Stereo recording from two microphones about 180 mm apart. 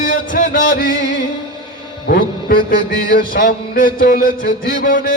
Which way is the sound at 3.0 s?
50° left (ahead or behind).